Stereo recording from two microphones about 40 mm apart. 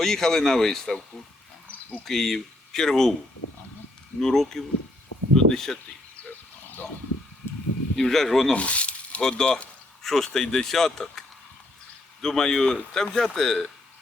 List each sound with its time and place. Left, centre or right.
0.0 s speech: centre
2.0 s speech: centre
4.2 s speech: centre
7.9 s speech: centre
8.5 s a sound: left
9.2 s speech: centre
12.2 s speech: centre